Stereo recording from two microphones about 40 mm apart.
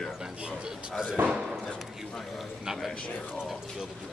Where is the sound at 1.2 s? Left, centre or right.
Right.